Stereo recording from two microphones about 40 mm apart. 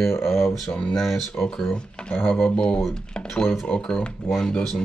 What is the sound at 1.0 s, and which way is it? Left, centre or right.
Speech, centre.